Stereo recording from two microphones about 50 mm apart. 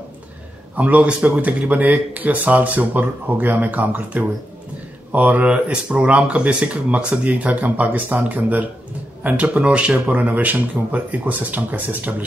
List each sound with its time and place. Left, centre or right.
0.7 s speech: right
9.7 s speech: right
10.1 s speech: right